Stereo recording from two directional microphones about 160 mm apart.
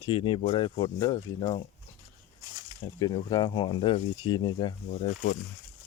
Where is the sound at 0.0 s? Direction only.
30° left (ahead or behind).